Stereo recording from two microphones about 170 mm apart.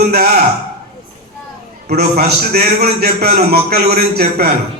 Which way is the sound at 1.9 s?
70° right (ahead or behind).